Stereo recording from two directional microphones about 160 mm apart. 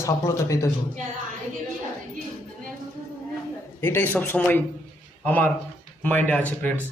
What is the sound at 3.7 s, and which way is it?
A man's voice, 15° left (ahead or behind).